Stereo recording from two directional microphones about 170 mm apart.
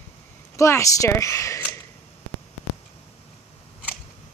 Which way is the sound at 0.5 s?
15° left (ahead or behind).